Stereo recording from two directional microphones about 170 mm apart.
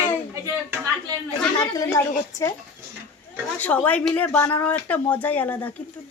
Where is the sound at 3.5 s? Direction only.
10° left (ahead or behind).